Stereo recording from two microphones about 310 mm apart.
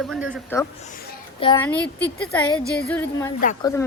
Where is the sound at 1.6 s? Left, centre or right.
Centre.